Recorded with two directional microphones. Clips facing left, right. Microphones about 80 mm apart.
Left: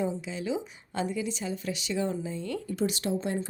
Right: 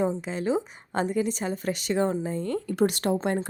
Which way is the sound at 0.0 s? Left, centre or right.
Right.